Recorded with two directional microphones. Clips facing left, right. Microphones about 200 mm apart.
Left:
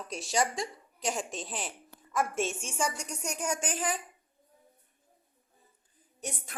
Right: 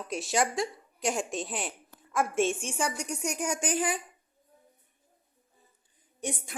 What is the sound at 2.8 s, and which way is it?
Speech, 10° right (ahead or behind).